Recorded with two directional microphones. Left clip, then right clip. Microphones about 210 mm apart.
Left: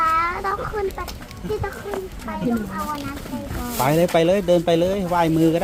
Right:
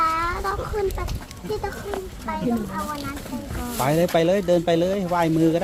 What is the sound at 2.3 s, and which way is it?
Speech, 10° right (ahead or behind).